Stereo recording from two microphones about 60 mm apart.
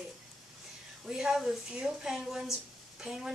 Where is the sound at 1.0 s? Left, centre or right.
Centre.